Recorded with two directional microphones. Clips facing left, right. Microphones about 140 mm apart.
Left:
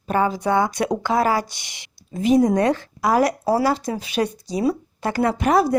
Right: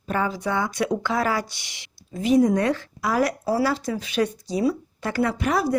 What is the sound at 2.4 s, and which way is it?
Speech, 40° left (ahead or behind).